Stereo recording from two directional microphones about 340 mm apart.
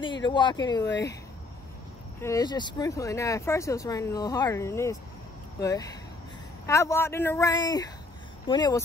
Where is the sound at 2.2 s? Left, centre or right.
Centre.